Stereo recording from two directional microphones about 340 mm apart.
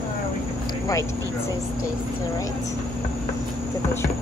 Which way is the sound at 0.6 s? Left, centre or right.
Centre.